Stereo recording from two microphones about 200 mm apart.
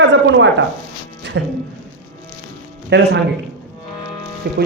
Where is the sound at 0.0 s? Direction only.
65° right (ahead or behind).